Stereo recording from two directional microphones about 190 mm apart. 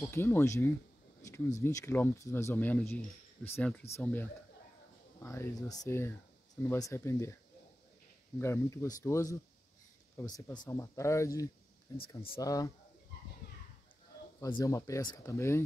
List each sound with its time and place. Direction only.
0.1 s speech: 10° left (ahead or behind)
8.4 s speech: 15° left (ahead or behind)
14.6 s speech: 15° left (ahead or behind)